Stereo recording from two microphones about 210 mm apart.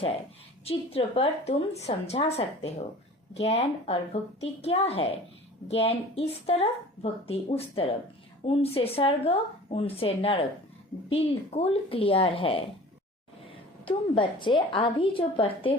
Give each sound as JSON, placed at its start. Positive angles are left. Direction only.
{"t": 0.6, "sound": "a woman's voice", "side_deg": 30}
{"t": 13.8, "sound": "a woman's voice", "side_deg": 25}